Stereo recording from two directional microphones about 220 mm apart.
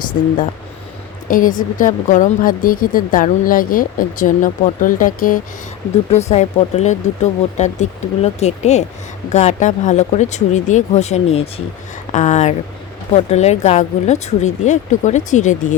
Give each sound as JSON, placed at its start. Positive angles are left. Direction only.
{"t": 1.3, "sound": "a woman's voice", "side_deg": 40}